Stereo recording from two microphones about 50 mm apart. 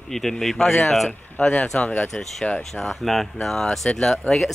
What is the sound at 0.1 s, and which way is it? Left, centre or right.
Speech, centre.